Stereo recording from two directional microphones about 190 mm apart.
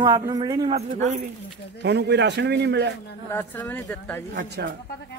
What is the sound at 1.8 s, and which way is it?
A man's voice, 65° right (ahead or behind).